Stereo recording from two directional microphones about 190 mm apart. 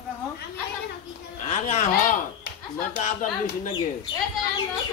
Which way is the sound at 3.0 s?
45° left (ahead or behind).